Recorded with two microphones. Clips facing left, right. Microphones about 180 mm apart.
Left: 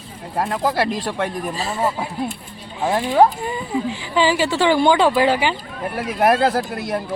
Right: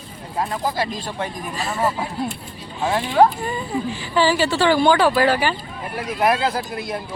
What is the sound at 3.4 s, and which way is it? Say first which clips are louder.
Speech: left 1 dB; 15° left (ahead or behind).